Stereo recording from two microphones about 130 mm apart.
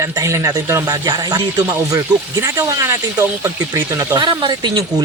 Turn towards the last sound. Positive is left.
turn(degrees=-30)  # may be behind; listen again after turning